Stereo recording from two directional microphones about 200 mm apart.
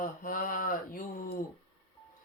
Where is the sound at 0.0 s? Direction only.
45° left (ahead or behind).